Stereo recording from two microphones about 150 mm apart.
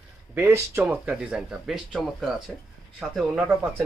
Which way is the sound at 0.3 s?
15° right (ahead or behind).